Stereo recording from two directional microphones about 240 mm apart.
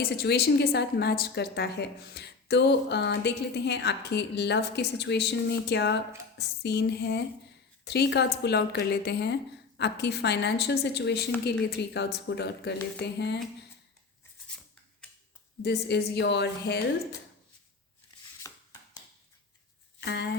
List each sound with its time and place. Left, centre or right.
0.2 s a woman's voice: left
15.6 s a woman's voice: left
20.0 s speech: left